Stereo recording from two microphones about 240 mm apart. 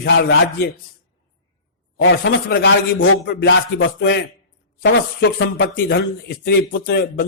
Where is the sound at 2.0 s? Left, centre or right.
Left.